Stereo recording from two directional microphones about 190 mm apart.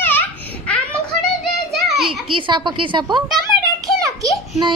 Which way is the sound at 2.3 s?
25° right (ahead or behind).